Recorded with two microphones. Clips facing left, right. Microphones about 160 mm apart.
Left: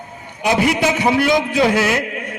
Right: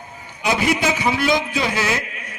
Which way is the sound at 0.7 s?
55° left (ahead or behind).